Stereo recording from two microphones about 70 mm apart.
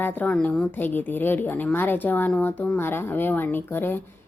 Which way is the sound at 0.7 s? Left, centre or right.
Left.